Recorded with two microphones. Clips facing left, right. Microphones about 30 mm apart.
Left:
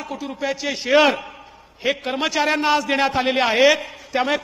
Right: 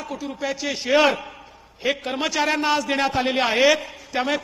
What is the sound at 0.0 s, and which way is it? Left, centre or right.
A man's voice, centre.